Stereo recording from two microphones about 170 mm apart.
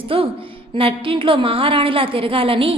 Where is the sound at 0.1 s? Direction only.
30° right (ahead or behind).